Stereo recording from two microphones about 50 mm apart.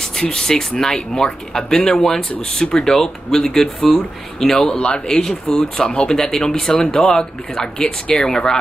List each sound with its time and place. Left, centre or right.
0.0 s speech: centre
4.7 s speech: left